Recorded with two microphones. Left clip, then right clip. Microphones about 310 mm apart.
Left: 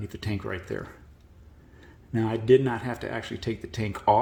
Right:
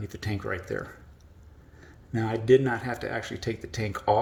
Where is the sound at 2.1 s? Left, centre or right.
Centre.